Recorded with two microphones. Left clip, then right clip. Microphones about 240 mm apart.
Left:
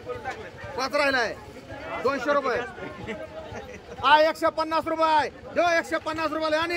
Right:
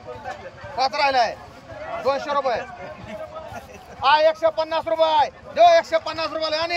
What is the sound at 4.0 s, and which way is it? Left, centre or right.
A man's voice, centre.